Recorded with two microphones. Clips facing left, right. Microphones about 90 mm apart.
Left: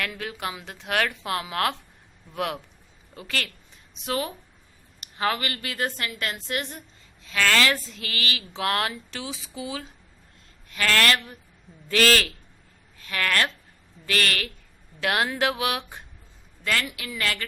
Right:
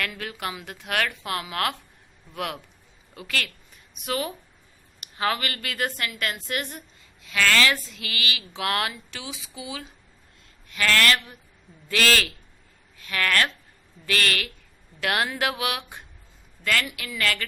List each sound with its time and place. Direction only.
0.2 s a woman's voice: 20° left (ahead or behind)